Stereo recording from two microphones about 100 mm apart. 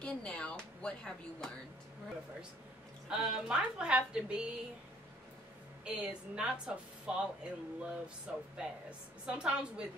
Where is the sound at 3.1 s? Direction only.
5° right (ahead or behind).